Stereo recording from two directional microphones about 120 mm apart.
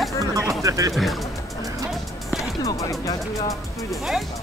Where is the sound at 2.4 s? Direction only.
25° left (ahead or behind).